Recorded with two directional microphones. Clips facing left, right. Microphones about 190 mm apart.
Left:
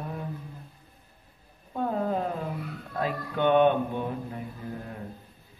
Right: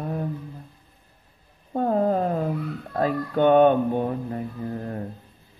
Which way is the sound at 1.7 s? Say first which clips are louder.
Right 6 dB; 45° right (ahead or behind).